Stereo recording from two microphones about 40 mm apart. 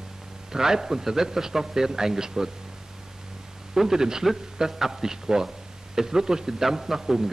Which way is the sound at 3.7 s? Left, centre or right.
Centre.